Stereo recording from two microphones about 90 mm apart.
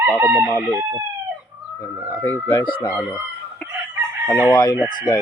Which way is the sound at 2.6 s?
65° left (ahead or behind).